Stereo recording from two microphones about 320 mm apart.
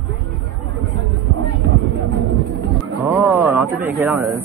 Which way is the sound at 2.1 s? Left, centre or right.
Right.